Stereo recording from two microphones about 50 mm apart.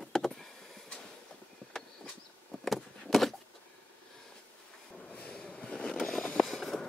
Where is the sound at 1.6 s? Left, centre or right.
Left.